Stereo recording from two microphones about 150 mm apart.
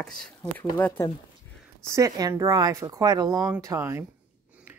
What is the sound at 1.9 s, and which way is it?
Speech, 20° right (ahead or behind).